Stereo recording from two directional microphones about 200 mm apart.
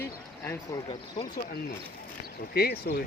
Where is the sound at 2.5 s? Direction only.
50° left (ahead or behind).